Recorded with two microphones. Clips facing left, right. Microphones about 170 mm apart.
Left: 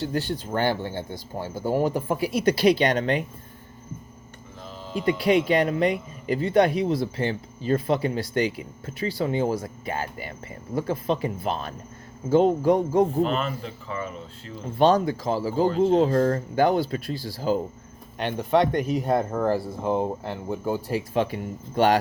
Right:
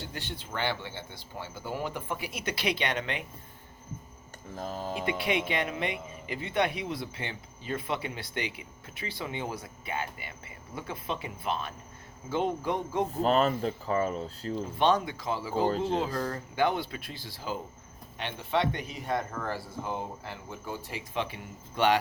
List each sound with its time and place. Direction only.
0.1 s speech: 40° left (ahead or behind)
4.5 s a sound: 45° right (ahead or behind)
5.0 s speech: 40° left (ahead or behind)
13.2 s speech: 40° right (ahead or behind)
14.8 s speech: 40° left (ahead or behind)